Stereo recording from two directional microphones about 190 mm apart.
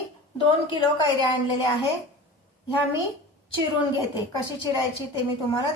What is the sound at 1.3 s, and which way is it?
Speech, 25° left (ahead or behind).